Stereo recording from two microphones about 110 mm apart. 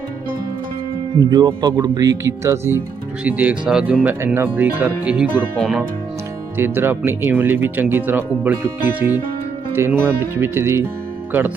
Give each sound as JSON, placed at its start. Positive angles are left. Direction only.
{"t": 1.2, "sound": "speech", "side_deg": -40}
{"t": 3.2, "sound": "speech", "side_deg": -15}
{"t": 6.6, "sound": "speech", "side_deg": -20}